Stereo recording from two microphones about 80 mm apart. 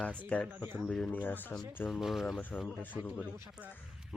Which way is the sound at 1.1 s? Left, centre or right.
Left.